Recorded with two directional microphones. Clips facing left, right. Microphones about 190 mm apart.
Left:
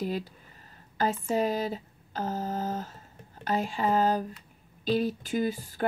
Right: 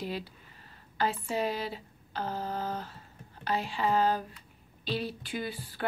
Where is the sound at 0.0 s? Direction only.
45° left (ahead or behind).